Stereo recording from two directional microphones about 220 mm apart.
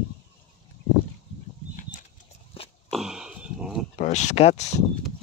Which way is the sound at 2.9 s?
Centre (ahead or behind).